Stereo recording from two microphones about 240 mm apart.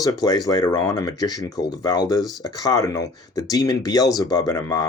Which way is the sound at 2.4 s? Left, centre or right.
Centre.